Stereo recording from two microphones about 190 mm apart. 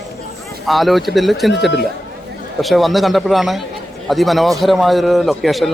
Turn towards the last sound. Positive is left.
turn(degrees=0)  # may be behind; listen again after turning